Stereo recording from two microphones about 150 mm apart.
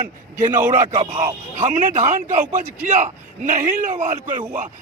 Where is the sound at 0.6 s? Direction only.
55° right (ahead or behind).